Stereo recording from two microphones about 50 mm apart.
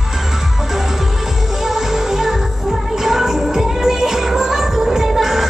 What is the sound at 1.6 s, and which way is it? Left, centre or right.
Music, centre.